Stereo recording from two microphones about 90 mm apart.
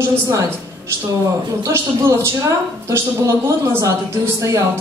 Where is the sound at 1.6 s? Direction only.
30° right (ahead or behind).